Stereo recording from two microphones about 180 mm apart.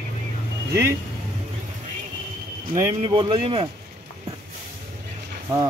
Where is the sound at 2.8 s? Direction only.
25° right (ahead or behind).